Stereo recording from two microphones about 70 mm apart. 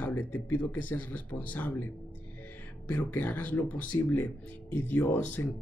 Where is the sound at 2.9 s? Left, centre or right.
Left.